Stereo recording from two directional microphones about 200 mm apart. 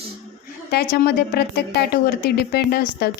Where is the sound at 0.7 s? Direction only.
55° left (ahead or behind).